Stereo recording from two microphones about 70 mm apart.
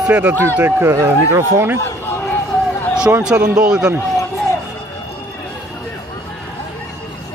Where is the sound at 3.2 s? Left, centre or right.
Centre.